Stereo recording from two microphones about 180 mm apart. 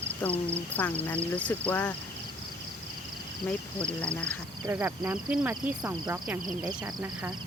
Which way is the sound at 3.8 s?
5° left (ahead or behind).